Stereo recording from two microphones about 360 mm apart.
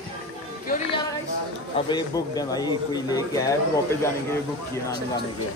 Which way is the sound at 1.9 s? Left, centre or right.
Centre.